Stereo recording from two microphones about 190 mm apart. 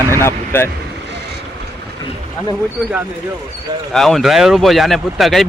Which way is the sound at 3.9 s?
Centre (ahead or behind).